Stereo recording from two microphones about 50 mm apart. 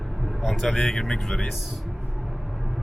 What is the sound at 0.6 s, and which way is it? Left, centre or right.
Speech, centre.